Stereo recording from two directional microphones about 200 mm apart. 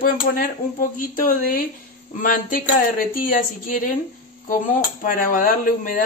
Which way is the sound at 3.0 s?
45° left (ahead or behind).